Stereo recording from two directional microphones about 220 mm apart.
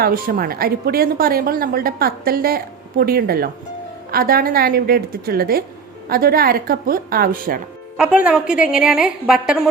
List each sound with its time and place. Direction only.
0.0 s speech: 40° right (ahead or behind)
7.9 s a woman's voice: 5° right (ahead or behind)